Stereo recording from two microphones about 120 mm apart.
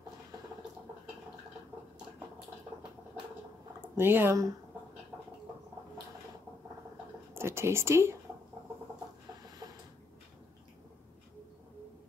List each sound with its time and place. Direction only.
3.9 s speech: 20° right (ahead or behind)
7.3 s speech: 20° right (ahead or behind)